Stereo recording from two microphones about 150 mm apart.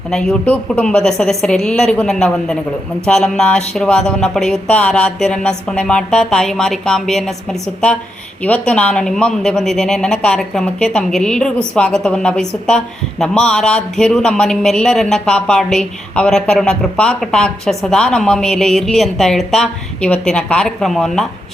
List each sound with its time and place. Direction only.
0.1 s speech: 5° left (ahead or behind)
8.4 s speech: 10° left (ahead or behind)